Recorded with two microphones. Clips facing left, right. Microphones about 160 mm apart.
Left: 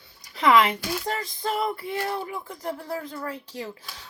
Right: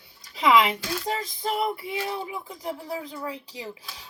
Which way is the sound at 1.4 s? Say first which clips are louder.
Even; 20° right (ahead or behind).